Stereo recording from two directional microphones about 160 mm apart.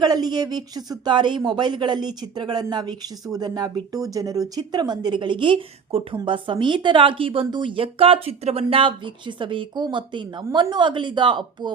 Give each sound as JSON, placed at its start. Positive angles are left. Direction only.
{"t": 0.0, "sound": "speech", "side_deg": -25}